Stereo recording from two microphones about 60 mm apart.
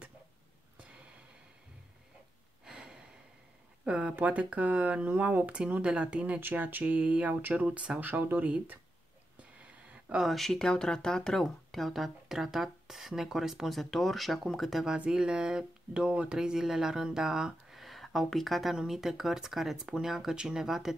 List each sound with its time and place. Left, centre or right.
2.6 s gasp: centre
3.8 s a sound: right
4.1 s speech: right
6.4 s speech: right
8.0 s speech: right
9.4 s a sound: right
10.1 s speech: centre
15.0 s speech: centre